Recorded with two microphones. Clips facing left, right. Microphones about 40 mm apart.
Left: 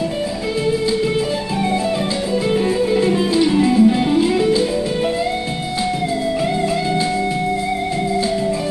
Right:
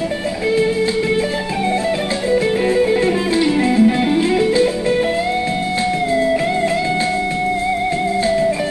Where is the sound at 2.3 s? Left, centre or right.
Right.